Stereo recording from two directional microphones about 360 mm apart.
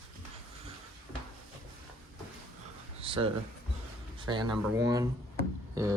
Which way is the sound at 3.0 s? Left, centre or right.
Centre.